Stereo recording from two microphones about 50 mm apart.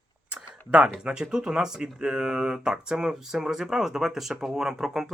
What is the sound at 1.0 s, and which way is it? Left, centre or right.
Speech, centre.